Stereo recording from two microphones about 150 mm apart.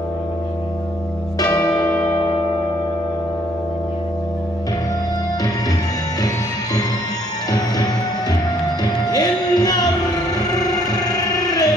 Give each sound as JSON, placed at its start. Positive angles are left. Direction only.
{"t": 1.4, "sound": "church bell", "side_deg": 25}
{"t": 1.7, "sound": "music", "side_deg": 5}
{"t": 6.2, "sound": "music", "side_deg": 25}